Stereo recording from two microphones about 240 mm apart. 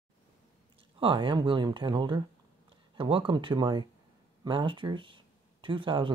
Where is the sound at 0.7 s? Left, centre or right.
Right.